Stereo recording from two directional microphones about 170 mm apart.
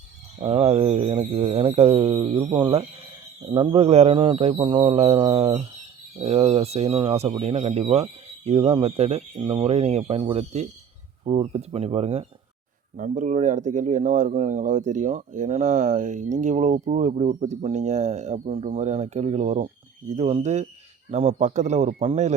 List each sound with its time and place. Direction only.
0.3 s speech: 35° right (ahead or behind)